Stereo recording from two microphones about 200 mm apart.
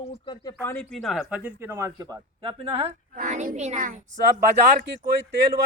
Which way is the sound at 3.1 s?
40° right (ahead or behind).